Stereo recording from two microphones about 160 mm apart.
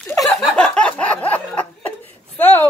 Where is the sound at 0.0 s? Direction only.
5° left (ahead or behind).